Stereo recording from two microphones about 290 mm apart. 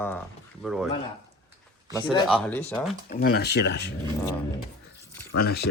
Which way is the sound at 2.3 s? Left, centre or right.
Centre.